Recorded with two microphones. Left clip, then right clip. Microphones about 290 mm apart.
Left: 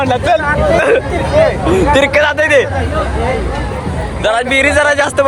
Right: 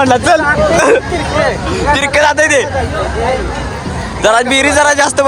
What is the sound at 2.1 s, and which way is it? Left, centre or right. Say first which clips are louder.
Hubbub: right 1 dB; centre.